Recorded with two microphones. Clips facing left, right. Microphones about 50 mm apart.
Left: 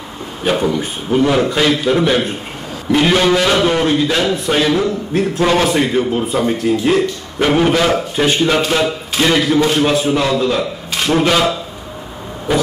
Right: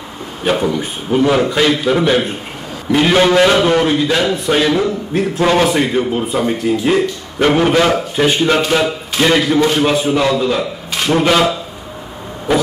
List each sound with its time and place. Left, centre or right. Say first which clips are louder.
0.4 s a man's voice: even; centre